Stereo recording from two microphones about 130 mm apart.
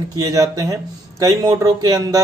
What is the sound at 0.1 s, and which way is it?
Speech, 25° right (ahead or behind).